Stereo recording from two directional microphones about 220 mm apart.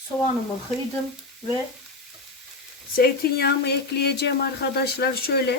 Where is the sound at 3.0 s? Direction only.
45° left (ahead or behind).